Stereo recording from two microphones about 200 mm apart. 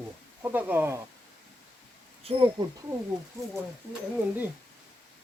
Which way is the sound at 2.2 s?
25° right (ahead or behind).